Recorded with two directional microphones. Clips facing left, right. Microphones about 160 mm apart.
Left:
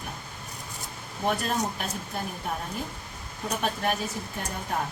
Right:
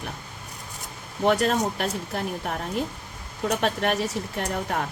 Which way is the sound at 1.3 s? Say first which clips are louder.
Right 6 dB; 75° right (ahead or behind).